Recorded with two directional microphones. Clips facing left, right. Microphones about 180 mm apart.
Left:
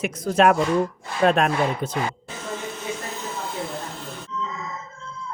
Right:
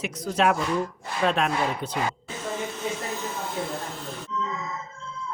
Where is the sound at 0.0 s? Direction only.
50° left (ahead or behind).